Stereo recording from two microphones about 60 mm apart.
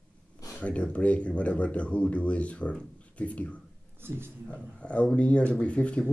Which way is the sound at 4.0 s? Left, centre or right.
Right.